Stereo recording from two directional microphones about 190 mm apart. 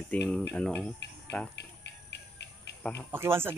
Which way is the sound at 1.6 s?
65° left (ahead or behind).